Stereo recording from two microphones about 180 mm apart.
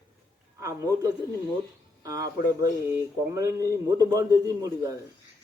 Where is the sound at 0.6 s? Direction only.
15° right (ahead or behind).